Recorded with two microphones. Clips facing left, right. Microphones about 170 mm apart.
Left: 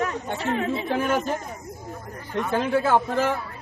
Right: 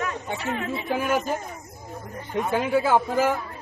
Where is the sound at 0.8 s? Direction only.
5° right (ahead or behind).